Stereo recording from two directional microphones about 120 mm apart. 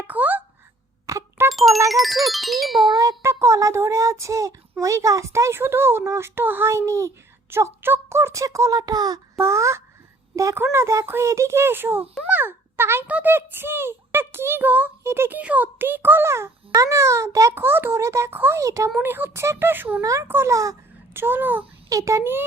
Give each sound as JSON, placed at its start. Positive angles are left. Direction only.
{"t": 0.1, "sound": "a sound", "side_deg": -15}
{"t": 1.0, "sound": "a sound", "side_deg": -25}
{"t": 1.5, "sound": "music", "side_deg": 0}
{"t": 1.9, "sound": "a child's voice", "side_deg": 0}
{"t": 2.9, "sound": "a child's voice", "side_deg": -30}
{"t": 21.8, "sound": "a child's voice", "side_deg": -25}